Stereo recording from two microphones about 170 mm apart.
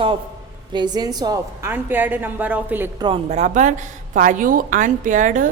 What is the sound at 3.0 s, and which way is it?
Speech, 30° right (ahead or behind).